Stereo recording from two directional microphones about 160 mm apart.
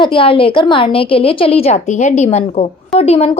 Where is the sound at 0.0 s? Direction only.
35° left (ahead or behind).